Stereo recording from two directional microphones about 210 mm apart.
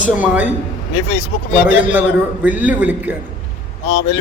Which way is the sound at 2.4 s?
5° right (ahead or behind).